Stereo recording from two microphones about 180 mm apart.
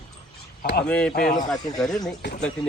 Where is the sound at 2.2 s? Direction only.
70° left (ahead or behind).